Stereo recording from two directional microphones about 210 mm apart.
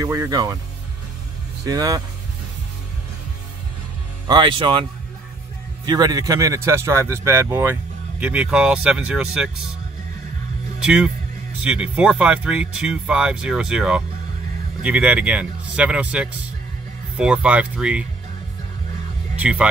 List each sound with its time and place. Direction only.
0.0 s speech: 15° right (ahead or behind)
1.7 s speech: 15° right (ahead or behind)
4.3 s speech: 20° right (ahead or behind)
5.9 s speech: 20° right (ahead or behind)
10.8 s speech: 5° right (ahead or behind)
19.3 s speech: 5° right (ahead or behind)